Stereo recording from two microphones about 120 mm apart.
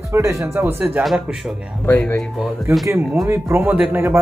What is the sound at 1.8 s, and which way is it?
Speech, 15° left (ahead or behind).